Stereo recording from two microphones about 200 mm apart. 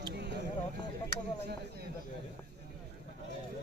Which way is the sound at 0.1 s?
55° right (ahead or behind).